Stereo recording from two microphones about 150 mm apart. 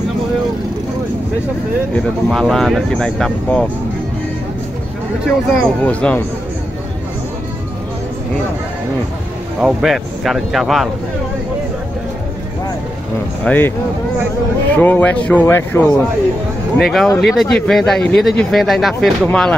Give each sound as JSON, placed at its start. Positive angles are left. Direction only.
{"t": 2.0, "sound": "speech", "side_deg": 5}
{"t": 5.2, "sound": "speech", "side_deg": 0}
{"t": 9.6, "sound": "speech", "side_deg": -5}
{"t": 13.4, "sound": "speech", "side_deg": 10}
{"t": 16.7, "sound": "speech", "side_deg": 0}